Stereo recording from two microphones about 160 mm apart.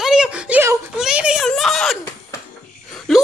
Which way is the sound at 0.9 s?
5° right (ahead or behind).